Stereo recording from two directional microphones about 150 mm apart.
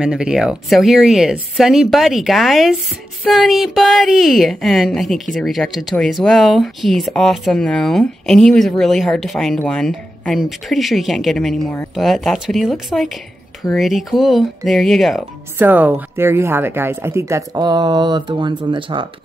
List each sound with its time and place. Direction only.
0.0 s a woman's voice: 5° right (ahead or behind)
15.5 s speech: 10° right (ahead or behind); by 19.0 s 35° right (ahead or behind)